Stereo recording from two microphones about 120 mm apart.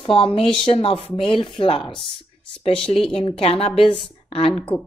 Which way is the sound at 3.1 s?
55° left (ahead or behind).